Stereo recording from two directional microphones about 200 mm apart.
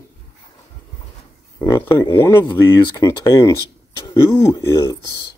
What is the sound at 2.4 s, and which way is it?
Speech, 25° left (ahead or behind).